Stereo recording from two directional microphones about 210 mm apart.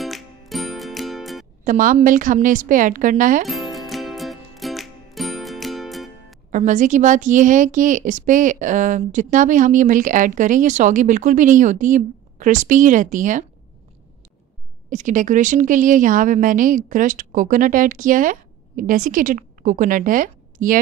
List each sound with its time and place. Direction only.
0.0 s music: centre (ahead or behind)
1.6 s a woman's voice: 40° right (ahead or behind)
3.4 s music: centre (ahead or behind)
6.5 s a woman's voice: 35° right (ahead or behind)
14.9 s a woman's voice: 35° right (ahead or behind)